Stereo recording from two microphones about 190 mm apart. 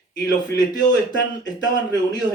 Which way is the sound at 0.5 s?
20° left (ahead or behind).